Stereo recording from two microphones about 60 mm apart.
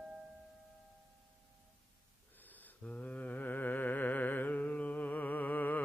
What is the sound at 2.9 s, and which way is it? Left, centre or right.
Music, left.